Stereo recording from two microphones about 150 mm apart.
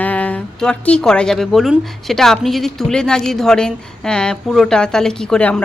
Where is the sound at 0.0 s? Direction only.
10° left (ahead or behind).